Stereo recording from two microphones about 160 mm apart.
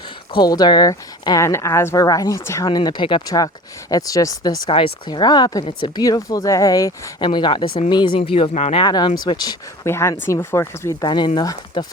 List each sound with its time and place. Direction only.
0.3 s speech: 25° left (ahead or behind)
8.8 s speech: 30° left (ahead or behind)